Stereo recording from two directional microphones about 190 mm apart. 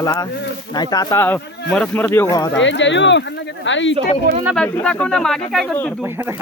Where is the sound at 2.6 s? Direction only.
75° left (ahead or behind).